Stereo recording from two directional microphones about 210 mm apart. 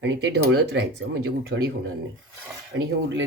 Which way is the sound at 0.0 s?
55° right (ahead or behind).